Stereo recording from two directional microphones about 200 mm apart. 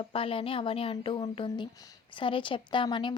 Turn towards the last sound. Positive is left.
turn(degrees=25)  # may be behind; listen again after turning